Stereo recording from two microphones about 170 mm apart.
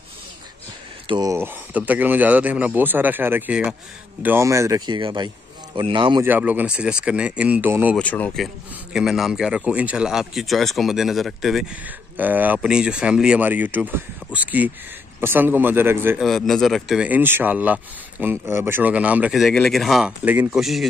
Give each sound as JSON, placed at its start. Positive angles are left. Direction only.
{"t": 1.0, "sound": "speech", "side_deg": -25}
{"t": 1.3, "sound": "speech", "side_deg": -10}
{"t": 6.2, "sound": "speech", "side_deg": -10}
{"t": 8.0, "sound": "speech", "side_deg": 10}
{"t": 8.9, "sound": "speech", "side_deg": 0}
{"t": 16.2, "sound": "speech", "side_deg": 0}